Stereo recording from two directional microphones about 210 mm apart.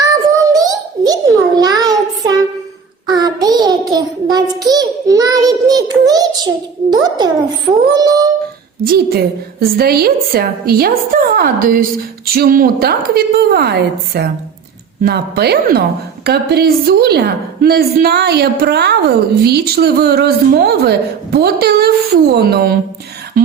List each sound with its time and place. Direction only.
0.0 s a sound: 15° right (ahead or behind)
7.9 s singing: 15° right (ahead or behind)
8.8 s a woman's voice: 45° right (ahead or behind)